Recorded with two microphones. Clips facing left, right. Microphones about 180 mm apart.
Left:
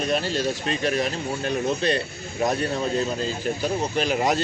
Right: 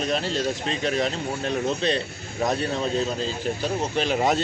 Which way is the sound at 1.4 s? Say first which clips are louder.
Left 1 dB; 25° right (ahead or behind).